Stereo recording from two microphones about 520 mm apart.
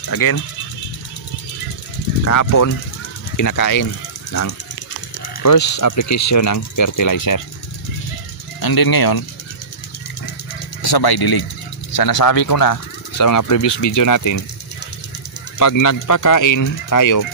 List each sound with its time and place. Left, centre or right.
0.0 s speech: left
2.2 s speech: left
8.5 s speech: left
10.8 s speech: left
15.6 s speech: left